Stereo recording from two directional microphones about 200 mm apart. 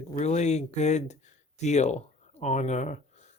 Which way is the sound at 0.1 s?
35° left (ahead or behind).